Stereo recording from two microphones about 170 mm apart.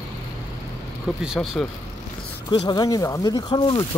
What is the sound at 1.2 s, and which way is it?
Speech, centre (ahead or behind).